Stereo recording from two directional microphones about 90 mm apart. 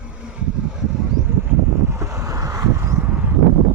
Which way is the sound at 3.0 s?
15° right (ahead or behind).